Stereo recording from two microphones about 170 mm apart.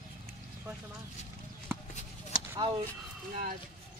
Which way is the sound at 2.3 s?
55° left (ahead or behind).